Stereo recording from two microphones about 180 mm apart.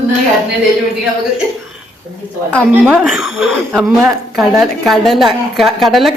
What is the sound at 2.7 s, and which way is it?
A woman's voice, 5° right (ahead or behind).